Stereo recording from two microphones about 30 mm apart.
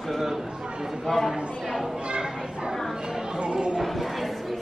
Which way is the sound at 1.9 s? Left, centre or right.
Right.